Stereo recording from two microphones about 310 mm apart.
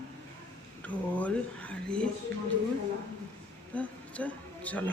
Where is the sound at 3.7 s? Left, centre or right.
Centre.